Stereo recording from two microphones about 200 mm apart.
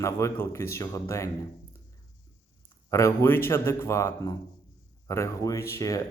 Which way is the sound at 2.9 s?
15° left (ahead or behind).